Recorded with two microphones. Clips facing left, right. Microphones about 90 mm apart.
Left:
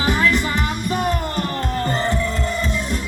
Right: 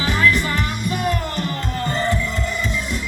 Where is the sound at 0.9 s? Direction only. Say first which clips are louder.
Even; 35° left (ahead or behind).